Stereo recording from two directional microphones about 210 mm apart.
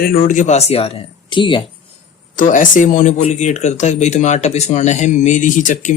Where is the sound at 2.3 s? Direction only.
40° left (ahead or behind).